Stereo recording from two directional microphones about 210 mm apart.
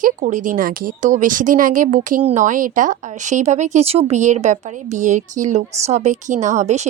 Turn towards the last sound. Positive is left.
turn(degrees=-35)  # may be behind; listen again after turning